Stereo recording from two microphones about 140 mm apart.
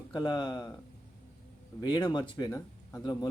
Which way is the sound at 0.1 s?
30° left (ahead or behind).